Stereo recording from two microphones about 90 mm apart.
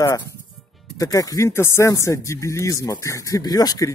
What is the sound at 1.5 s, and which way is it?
Speech, 30° left (ahead or behind).